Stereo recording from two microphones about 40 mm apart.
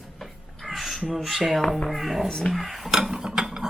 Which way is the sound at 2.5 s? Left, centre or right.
Centre.